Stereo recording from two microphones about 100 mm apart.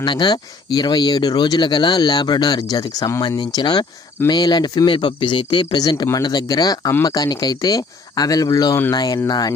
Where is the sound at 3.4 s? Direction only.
50° left (ahead or behind).